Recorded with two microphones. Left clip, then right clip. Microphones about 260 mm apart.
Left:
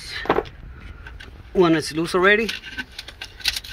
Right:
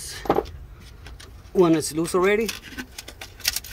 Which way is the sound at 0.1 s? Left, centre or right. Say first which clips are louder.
Left 2 dB; centre.